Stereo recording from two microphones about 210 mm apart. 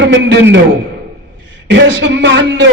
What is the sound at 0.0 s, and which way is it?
Speech, 60° right (ahead or behind).